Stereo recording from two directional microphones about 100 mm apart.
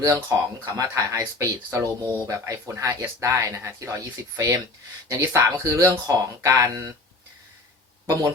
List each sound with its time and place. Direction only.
0.0 s speech: 35° right (ahead or behind)